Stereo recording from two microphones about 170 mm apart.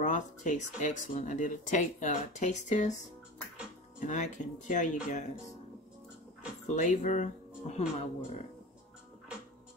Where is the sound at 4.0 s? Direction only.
45° left (ahead or behind).